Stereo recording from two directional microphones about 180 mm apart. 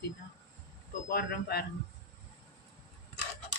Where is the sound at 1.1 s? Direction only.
60° left (ahead or behind).